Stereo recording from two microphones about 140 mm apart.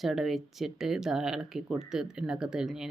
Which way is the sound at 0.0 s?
Centre (ahead or behind).